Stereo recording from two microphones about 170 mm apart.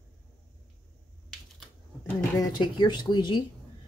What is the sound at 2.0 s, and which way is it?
Speech, 25° left (ahead or behind).